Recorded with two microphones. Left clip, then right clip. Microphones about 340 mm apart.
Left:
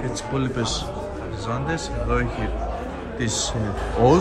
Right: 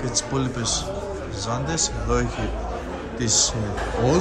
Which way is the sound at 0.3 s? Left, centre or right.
Centre.